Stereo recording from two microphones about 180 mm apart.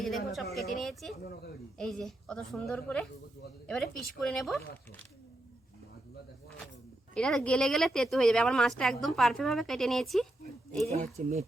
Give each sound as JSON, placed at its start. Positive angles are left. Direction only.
{"t": 0.0, "sound": "speech", "side_deg": 0}
{"t": 7.1, "sound": "speech", "side_deg": 5}
{"t": 10.8, "sound": "speech", "side_deg": -40}